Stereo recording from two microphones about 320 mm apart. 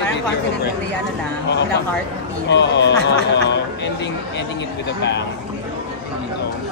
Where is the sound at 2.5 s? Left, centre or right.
Left.